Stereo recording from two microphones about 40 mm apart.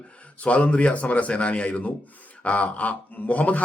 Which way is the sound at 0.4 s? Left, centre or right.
Left.